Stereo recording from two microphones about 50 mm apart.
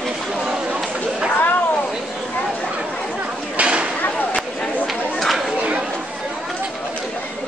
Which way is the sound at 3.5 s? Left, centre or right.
Right.